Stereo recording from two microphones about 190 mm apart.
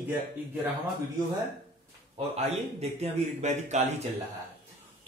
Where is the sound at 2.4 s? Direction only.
35° right (ahead or behind).